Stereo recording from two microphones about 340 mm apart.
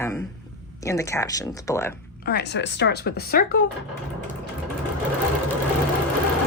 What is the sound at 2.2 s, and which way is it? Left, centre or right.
Speech, left.